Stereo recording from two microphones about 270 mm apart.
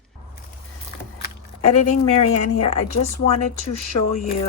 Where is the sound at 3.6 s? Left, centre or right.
Left.